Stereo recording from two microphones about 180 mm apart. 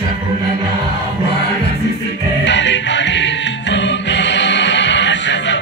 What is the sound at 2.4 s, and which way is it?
Music, 90° left.